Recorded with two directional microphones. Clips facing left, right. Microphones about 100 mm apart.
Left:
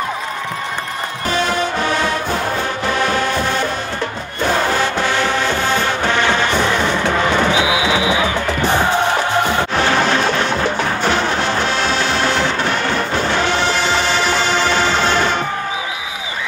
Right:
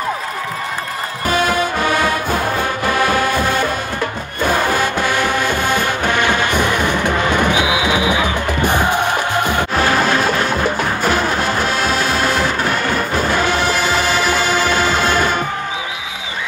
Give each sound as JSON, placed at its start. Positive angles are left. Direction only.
{"t": 1.3, "sound": "music", "side_deg": -10}
{"t": 8.6, "sound": "music", "side_deg": -15}
{"t": 9.8, "sound": "music", "side_deg": -45}
{"t": 10.5, "sound": "music", "side_deg": -10}
{"t": 12.3, "sound": "music", "side_deg": -45}
{"t": 12.8, "sound": "music", "side_deg": -10}